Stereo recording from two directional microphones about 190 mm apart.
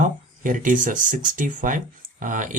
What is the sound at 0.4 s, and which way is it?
Speech, 45° right (ahead or behind).